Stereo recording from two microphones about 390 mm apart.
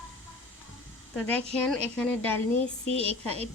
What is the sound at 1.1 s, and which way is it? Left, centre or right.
Speech, centre.